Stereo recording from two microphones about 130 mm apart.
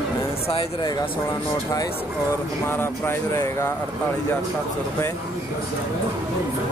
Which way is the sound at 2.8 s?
20° left (ahead or behind).